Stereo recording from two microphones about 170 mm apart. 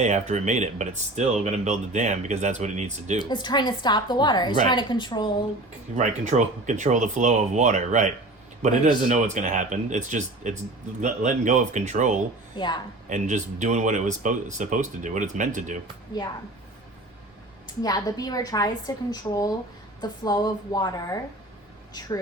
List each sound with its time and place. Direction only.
0.0 s speech: 45° right (ahead or behind)
3.2 s a woman's voice: 25° left (ahead or behind)
6.0 s speech: 45° right (ahead or behind)
12.5 s a woman's voice: 25° left (ahead or behind)
13.1 s speech: 45° right (ahead or behind)
17.8 s a woman's voice: 20° left (ahead or behind)